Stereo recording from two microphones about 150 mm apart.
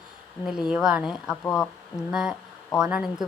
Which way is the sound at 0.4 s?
5° right (ahead or behind).